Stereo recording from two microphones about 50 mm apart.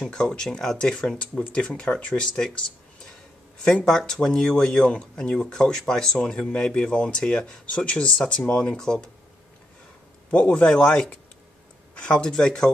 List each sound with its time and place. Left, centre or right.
0.0 s speech: centre
3.6 s speech: centre
10.3 s speech: left